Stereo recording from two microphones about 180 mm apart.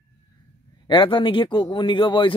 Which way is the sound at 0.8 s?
25° left (ahead or behind).